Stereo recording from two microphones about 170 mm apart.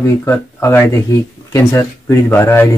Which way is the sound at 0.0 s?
15° left (ahead or behind).